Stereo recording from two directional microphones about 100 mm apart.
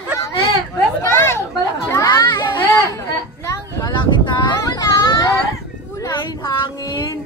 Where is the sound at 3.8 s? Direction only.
50° left (ahead or behind).